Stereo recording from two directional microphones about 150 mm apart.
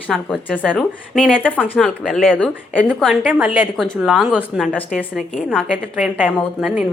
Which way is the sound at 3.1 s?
10° right (ahead or behind).